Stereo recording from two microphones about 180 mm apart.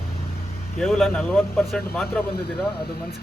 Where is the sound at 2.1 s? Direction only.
65° left (ahead or behind).